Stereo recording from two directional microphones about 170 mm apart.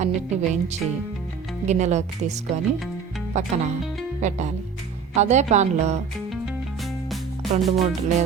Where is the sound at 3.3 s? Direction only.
45° right (ahead or behind).